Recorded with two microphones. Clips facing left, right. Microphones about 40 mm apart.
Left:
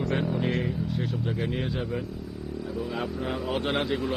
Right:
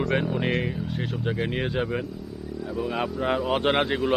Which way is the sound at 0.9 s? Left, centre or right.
Right.